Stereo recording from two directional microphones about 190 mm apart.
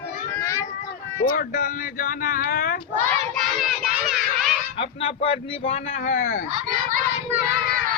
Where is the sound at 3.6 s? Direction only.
Centre (ahead or behind).